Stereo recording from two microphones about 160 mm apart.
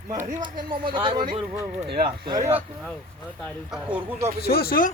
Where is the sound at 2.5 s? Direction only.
Centre (ahead or behind).